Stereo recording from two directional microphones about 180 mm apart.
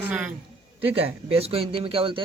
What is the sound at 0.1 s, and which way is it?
Speech, 5° right (ahead or behind).